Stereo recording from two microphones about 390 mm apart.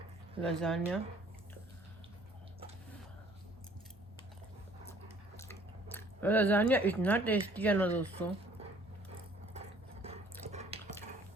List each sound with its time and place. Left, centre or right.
0.4 s speech: centre
5.4 s speech: centre
9.5 s sewing machine: centre
10.5 s a sound: centre